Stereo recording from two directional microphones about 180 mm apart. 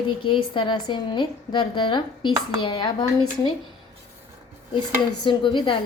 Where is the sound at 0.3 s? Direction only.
25° left (ahead or behind).